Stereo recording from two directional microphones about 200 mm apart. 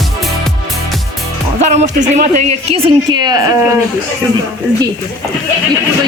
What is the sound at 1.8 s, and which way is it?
Speech, 35° right (ahead or behind).